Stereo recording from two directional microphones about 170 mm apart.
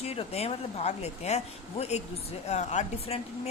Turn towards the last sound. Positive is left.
turn(degrees=40)  # may be behind; listen again after turning